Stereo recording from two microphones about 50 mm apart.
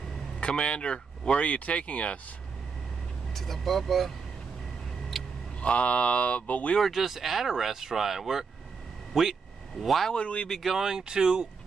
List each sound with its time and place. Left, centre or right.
0.4 s speech: centre
3.3 s speech: centre
5.1 s vehicle: centre
5.6 s speech: left
6.8 s speech: centre
10.1 s speech: left
10.6 s speech: centre